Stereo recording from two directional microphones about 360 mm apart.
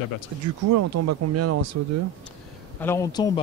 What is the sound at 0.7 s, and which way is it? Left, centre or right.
Speech, right.